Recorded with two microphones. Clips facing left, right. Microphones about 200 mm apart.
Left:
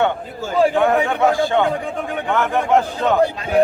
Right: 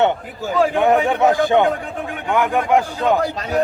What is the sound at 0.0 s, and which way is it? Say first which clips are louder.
A man's voice: right 2 dB; 20° right (ahead or behind).